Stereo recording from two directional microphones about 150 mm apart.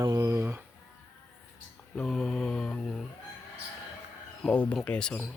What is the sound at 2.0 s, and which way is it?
Speech, centre (ahead or behind).